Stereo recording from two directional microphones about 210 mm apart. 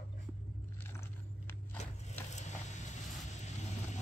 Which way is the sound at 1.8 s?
30° left (ahead or behind).